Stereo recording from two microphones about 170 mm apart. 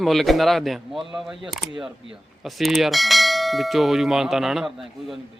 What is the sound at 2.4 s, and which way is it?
A man's voice, centre (ahead or behind).